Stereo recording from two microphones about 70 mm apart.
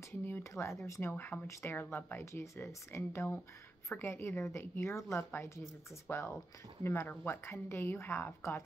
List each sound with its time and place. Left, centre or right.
0.4 s a woman's voice: left
0.8 s speech: left
1.1 s a woman's voice: left